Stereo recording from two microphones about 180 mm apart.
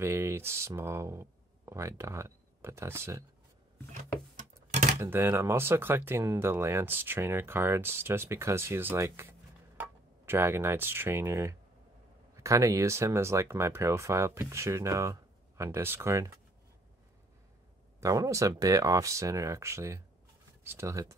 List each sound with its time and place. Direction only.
0.0 s speech: 15° right (ahead or behind)
3.9 s a sound: 45° right (ahead or behind)
5.0 s speech: 15° right (ahead or behind)
18.0 s speech: 20° right (ahead or behind)